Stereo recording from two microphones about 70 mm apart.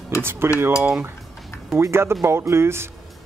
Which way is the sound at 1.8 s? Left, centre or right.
Right.